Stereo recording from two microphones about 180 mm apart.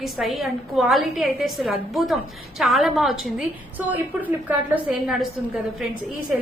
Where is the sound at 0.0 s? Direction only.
Centre (ahead or behind).